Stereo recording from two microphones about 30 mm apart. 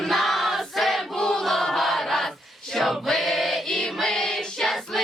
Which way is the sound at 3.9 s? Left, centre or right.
Centre.